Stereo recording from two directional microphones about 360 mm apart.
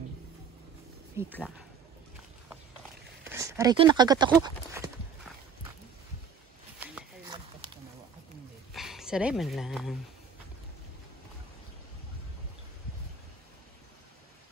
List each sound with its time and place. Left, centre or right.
1.2 s speech: centre
3.3 s speech: centre
6.8 s a sound: centre
8.7 s speech: centre